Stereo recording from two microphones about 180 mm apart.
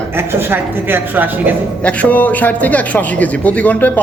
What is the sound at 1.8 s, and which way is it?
A man's voice, 10° left (ahead or behind).